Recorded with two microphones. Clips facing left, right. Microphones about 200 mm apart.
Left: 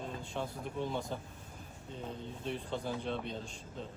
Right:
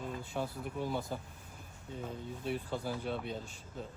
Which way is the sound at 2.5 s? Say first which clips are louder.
Right 1 dB; 5° right (ahead or behind).